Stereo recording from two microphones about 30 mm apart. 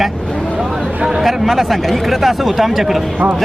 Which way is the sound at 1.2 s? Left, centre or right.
Centre.